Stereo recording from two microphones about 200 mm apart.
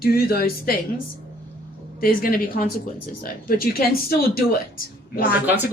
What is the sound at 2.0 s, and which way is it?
A woman's voice, 45° left (ahead or behind).